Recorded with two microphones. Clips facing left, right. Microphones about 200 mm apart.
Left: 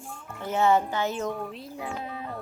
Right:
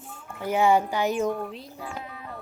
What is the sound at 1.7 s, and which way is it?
Speech, 25° left (ahead or behind).